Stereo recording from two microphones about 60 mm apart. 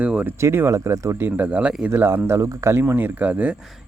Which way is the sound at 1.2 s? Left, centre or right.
Right.